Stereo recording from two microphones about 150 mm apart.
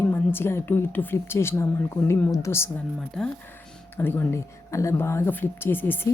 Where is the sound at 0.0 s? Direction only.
15° left (ahead or behind).